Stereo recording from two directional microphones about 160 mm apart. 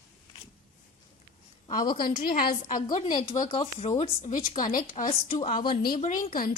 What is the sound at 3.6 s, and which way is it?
Speech, 40° left (ahead or behind).